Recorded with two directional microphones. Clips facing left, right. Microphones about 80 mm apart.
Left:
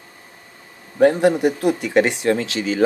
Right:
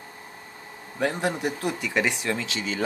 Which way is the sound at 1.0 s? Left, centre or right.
Left.